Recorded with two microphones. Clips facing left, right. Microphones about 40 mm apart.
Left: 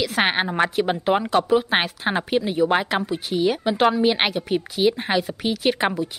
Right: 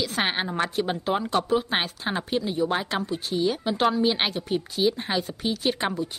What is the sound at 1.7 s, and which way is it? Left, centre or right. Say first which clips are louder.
Speech: left 5 dB; centre.